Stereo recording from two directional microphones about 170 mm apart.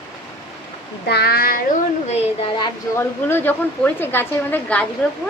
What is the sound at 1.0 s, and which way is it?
Speech, 70° left (ahead or behind).